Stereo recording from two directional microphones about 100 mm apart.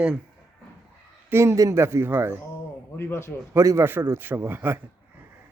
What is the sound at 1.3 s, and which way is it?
A man's voice, 30° right (ahead or behind).